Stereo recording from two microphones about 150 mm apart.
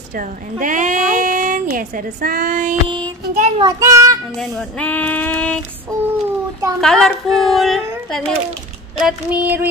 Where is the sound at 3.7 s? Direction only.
20° right (ahead or behind).